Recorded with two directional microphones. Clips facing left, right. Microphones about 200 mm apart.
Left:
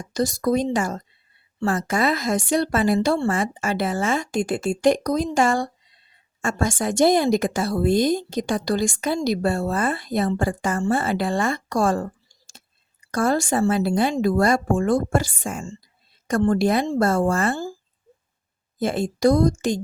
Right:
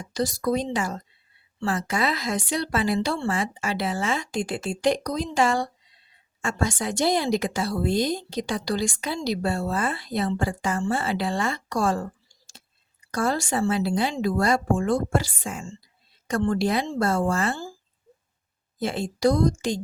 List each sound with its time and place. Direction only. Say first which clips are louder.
0.1 s a woman's voice: left 3 dB; 45° left (ahead or behind)
13.1 s a woman's voice: left 4 dB; 50° left (ahead or behind)
18.8 s a woman's voice: left 4 dB; 50° left (ahead or behind)